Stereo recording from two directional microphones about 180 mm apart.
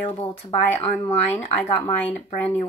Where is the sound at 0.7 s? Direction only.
10° left (ahead or behind).